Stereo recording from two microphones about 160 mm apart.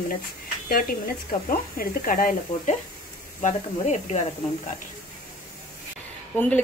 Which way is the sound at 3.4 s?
50° left (ahead or behind).